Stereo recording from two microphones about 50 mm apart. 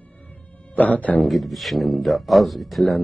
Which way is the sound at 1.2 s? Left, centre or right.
Centre.